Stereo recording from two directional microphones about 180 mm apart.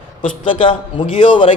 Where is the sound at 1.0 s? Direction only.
35° left (ahead or behind).